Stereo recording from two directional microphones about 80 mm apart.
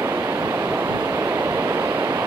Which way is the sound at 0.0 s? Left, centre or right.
Right.